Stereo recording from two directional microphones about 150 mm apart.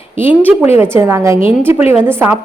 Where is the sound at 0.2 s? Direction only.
15° right (ahead or behind).